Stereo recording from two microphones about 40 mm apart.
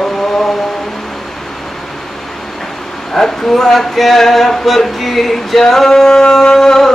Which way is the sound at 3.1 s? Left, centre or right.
Centre.